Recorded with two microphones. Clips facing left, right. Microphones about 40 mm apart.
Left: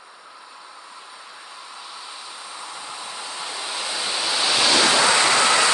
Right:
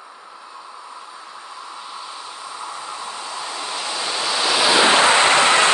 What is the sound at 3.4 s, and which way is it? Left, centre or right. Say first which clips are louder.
Waves: right 1 dB; centre.